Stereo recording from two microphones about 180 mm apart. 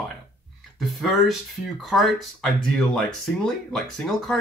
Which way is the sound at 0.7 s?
Centre (ahead or behind).